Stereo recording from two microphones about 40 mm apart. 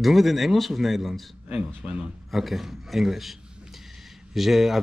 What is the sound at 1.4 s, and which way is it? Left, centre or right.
Speech, right.